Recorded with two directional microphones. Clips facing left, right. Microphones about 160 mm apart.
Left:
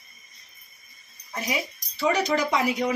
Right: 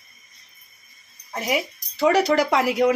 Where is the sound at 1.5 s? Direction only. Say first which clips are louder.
Right 8 dB; 90° right; by 2.9 s 75° right (ahead or behind).